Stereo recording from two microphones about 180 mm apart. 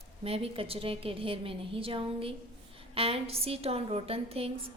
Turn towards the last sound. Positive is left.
turn(degrees=-35)  # may be behind; listen again after turning